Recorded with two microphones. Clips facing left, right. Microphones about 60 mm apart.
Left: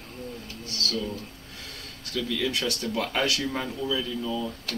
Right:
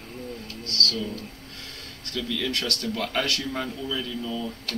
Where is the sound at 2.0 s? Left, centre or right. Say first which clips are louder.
Left 1 dB; centre.